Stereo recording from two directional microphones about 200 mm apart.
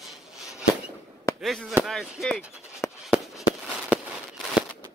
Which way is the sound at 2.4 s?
15° left (ahead or behind).